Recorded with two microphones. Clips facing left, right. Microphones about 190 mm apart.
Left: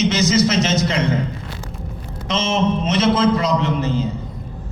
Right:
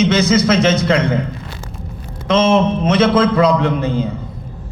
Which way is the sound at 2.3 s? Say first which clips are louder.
Right 6 dB; 55° right (ahead or behind).